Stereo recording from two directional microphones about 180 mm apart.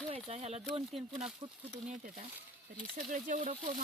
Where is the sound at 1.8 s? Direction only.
45° right (ahead or behind).